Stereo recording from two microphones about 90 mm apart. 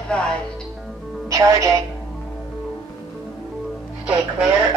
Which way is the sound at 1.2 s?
40° right (ahead or behind).